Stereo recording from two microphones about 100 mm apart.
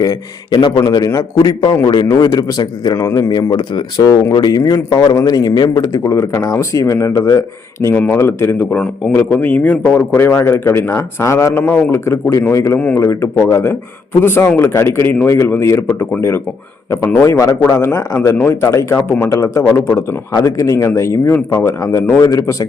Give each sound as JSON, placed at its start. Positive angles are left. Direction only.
{"t": 0.8, "sound": "a man's voice", "side_deg": 40}
{"t": 7.9, "sound": "a man's voice", "side_deg": 20}
{"t": 8.7, "sound": "a man's voice", "side_deg": 5}
{"t": 9.1, "sound": "a man's voice", "side_deg": 20}